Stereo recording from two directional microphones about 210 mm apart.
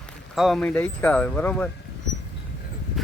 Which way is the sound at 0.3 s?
Centre (ahead or behind).